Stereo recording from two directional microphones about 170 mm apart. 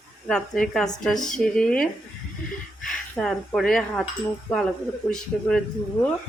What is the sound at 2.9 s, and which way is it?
Speech, 5° left (ahead or behind).